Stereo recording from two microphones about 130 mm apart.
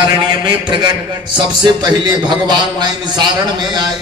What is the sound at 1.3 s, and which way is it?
A man's voice, 35° right (ahead or behind).